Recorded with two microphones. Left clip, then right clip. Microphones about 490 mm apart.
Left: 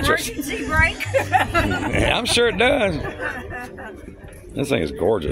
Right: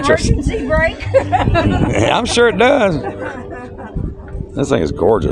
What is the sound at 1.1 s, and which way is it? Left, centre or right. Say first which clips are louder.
Speech: right 5 dB; centre.